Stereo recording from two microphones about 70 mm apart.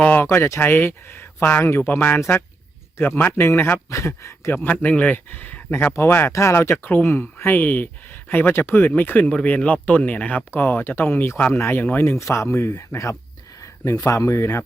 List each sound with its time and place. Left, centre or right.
0.3 s speech: left
0.6 s speech: left
4.5 s speech: left
5.9 s speech: left
12.1 s speech: left